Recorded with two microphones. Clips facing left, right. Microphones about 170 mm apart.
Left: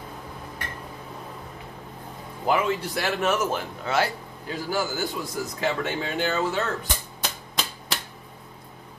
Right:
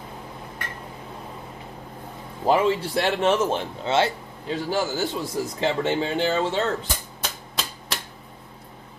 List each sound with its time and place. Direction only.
2.4 s a man's voice: 30° right (ahead or behind)
7.2 s typewriter: centre (ahead or behind)